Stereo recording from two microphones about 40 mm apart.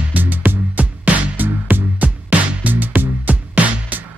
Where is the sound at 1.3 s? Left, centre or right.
Right.